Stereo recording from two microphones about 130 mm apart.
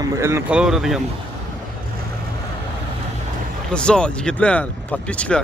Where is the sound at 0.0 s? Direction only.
20° right (ahead or behind).